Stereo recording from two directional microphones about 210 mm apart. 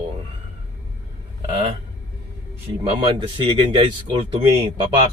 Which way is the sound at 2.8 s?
25° right (ahead or behind).